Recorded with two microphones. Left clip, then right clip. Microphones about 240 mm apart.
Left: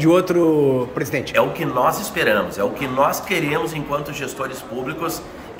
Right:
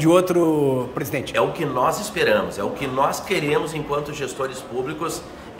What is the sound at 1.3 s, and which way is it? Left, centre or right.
Speech, centre.